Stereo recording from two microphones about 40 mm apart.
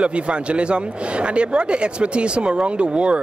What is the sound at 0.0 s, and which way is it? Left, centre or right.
Speech, right.